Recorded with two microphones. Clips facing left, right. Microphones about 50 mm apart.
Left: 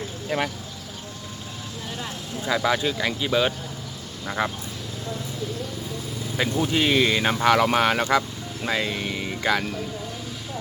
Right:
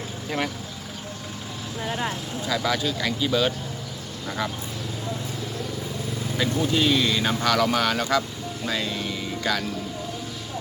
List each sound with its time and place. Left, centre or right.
0.3 s speech: centre
1.8 s vehicle: right
2.5 s speech: left
6.3 s speech: left